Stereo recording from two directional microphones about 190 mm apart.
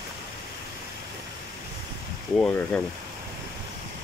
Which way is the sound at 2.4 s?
5° left (ahead or behind).